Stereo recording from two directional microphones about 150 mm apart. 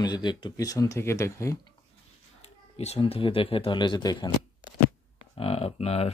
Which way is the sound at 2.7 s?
45° left (ahead or behind).